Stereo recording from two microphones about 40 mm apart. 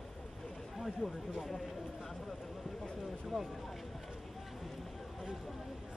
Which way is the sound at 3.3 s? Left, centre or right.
Centre.